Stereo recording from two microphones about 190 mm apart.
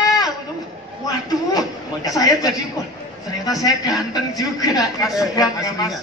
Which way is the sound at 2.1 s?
20° left (ahead or behind).